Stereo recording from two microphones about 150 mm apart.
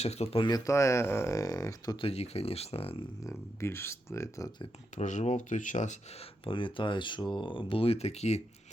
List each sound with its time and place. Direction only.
0.0 s speech: 45° left (ahead or behind)
0.4 s speech: 25° left (ahead or behind)
2.0 s speech: 45° left (ahead or behind)
3.2 s speech: 15° left (ahead or behind)
5.0 s speech: 50° left (ahead or behind)
6.4 s speech: 35° left (ahead or behind)